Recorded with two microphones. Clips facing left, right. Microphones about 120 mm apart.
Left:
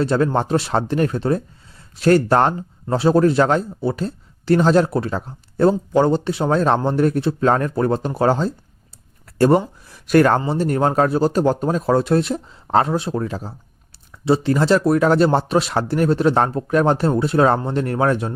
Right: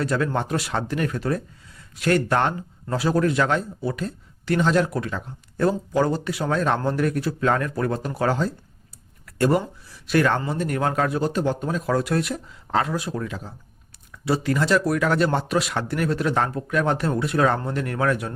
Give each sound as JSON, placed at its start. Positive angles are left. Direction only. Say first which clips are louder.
{"t": 0.0, "sound": "speech", "louder": "left 6 dB", "side_deg": 30}
{"t": 9.8, "sound": "speech", "louder": "left 6 dB", "side_deg": 50}
{"t": 10.4, "sound": "speech", "louder": "left 6 dB", "side_deg": 30}